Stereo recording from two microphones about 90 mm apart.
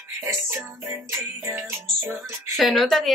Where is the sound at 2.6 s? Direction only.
Centre (ahead or behind).